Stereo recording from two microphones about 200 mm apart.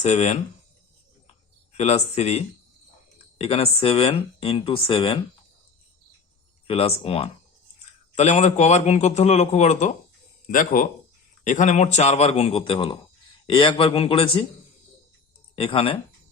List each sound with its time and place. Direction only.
0.0 s a man's voice: 35° left (ahead or behind)
1.7 s a man's voice: 30° left (ahead or behind)
6.7 s a man's voice: 30° left (ahead or behind)
15.5 s speech: 25° left (ahead or behind)